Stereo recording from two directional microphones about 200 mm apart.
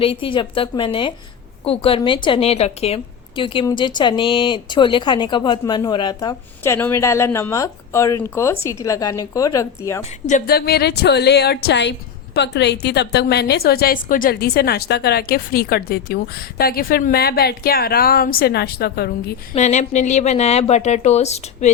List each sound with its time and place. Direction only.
0.0 s a woman's voice: 25° left (ahead or behind)
10.0 s a woman's voice: 40° left (ahead or behind)
19.5 s speech: 35° left (ahead or behind)